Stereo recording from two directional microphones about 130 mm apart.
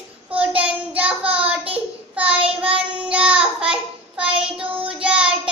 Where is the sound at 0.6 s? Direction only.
10° right (ahead or behind).